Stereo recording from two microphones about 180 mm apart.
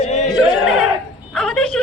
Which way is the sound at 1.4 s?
5° left (ahead or behind).